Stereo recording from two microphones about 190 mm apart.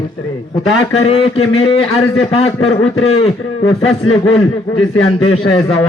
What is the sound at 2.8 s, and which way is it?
Speech, 90° left.